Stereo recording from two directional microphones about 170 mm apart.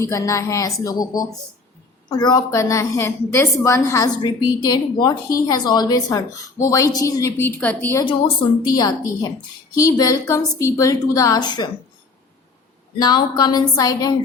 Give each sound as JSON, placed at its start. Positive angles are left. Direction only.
{"t": 0.0, "sound": "a woman's voice", "side_deg": 20}
{"t": 8.0, "sound": "a woman's voice", "side_deg": 25}
{"t": 13.0, "sound": "a woman's voice", "side_deg": 25}